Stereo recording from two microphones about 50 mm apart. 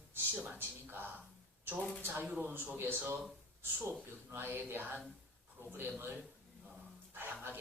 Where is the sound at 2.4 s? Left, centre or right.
Right.